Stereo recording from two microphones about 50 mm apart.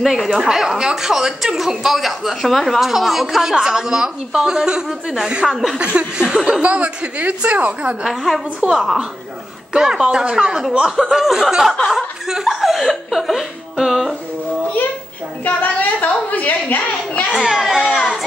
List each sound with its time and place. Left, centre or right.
0.0 s a child's voice: centre
5.9 s speech: centre
6.6 s a woman's voice: right
8.0 s a child's voice: centre
15.4 s a woman's voice: left
17.3 s a child's voice: centre